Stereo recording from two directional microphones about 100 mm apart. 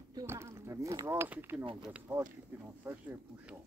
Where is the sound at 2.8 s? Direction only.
20° right (ahead or behind).